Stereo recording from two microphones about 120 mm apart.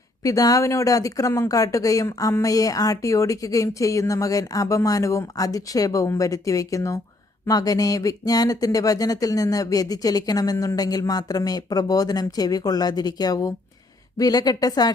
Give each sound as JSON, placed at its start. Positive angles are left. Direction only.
{"t": 0.2, "sound": "speech", "side_deg": 30}